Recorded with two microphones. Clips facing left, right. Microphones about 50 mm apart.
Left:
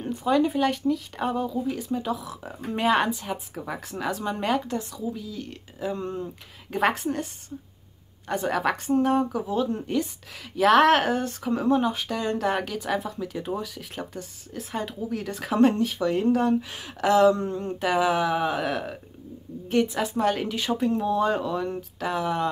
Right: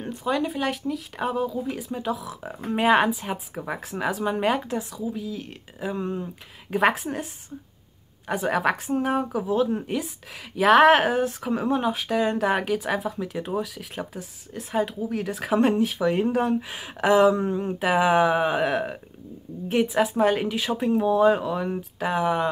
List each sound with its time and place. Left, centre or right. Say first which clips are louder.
0.0 s speech: left 3 dB; centre
3.8 s speech: right 3 dB; centre
17.9 s speech: right 4 dB; right
19.7 s speech: right 2 dB; centre